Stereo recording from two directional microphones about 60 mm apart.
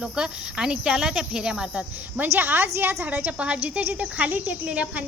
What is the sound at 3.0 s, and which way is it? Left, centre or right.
Speech, right.